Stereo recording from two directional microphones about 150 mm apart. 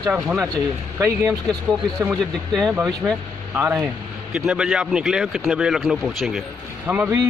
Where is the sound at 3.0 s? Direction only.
10° right (ahead or behind).